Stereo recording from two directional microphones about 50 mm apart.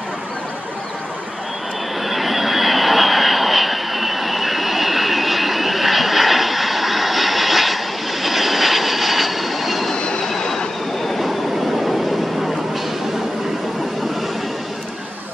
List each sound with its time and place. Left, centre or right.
2.0 s vehicle: centre
9.9 s train: centre
10.2 s train: centre